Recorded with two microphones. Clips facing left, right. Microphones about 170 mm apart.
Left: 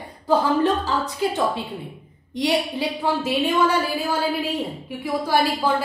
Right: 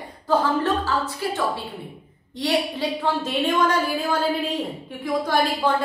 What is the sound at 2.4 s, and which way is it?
A woman's voice, 15° left (ahead or behind).